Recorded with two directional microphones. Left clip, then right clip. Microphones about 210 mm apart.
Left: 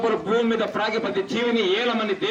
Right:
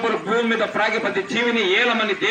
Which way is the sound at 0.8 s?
20° right (ahead or behind).